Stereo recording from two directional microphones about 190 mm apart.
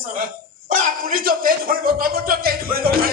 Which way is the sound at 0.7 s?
45° right (ahead or behind).